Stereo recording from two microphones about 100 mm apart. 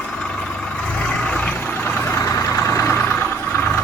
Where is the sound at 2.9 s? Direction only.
15° left (ahead or behind).